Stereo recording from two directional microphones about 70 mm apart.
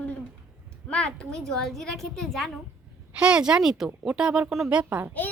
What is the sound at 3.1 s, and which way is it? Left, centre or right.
Speech, centre.